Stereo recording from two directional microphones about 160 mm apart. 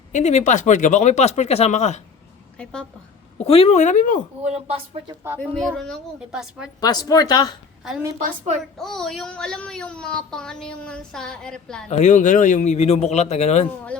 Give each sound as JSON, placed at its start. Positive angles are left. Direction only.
{"t": 0.1, "sound": "speech", "side_deg": 45}
{"t": 3.3, "sound": "speech", "side_deg": 35}
{"t": 4.4, "sound": "speech", "side_deg": -40}
{"t": 5.4, "sound": "a woman's voice", "side_deg": 5}
{"t": 6.8, "sound": "speech", "side_deg": 25}
{"t": 8.8, "sound": "a woman's voice", "side_deg": 0}
{"t": 11.9, "sound": "speech", "side_deg": 45}